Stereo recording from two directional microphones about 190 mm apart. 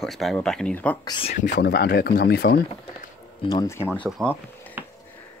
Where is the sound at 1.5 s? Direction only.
60° left (ahead or behind).